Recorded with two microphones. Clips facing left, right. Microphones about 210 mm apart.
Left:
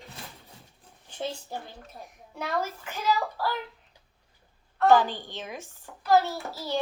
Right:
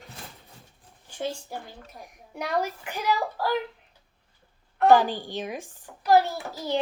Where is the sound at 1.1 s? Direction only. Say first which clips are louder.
Right 2 dB; 10° right (ahead or behind).